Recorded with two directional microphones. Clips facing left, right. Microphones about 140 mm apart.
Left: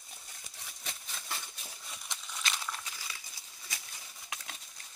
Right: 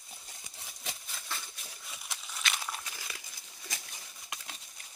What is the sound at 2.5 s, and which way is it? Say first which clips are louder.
Crumpling: right 1 dB; 15° right (ahead or behind).